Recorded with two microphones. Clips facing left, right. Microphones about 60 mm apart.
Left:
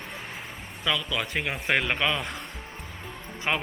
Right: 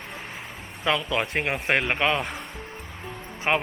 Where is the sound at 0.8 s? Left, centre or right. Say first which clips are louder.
Right 4 dB; right.